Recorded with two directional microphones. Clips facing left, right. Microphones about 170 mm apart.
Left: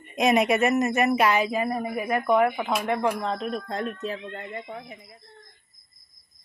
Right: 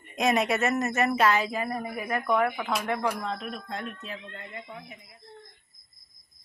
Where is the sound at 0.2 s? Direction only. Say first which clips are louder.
Left 4 dB; 15° left (ahead or behind); by 5.2 s 40° left (ahead or behind).